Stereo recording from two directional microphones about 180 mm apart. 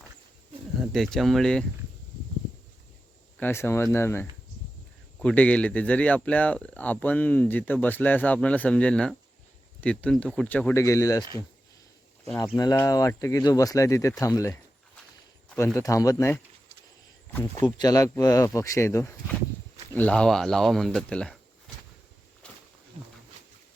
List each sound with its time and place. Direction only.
0.9 s speech: centre (ahead or behind)
3.3 s speech: 10° left (ahead or behind)
12.5 s speech: 20° left (ahead or behind)
15.5 s speech: 15° left (ahead or behind)
17.6 s speech: 20° left (ahead or behind); by 21.3 s 5° left (ahead or behind)
22.4 s wild animals: 5° left (ahead or behind)